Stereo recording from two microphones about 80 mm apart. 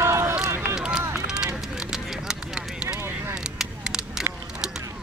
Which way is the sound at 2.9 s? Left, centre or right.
Right.